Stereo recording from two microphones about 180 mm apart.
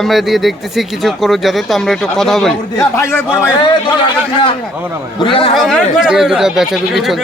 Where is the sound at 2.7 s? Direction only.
15° left (ahead or behind).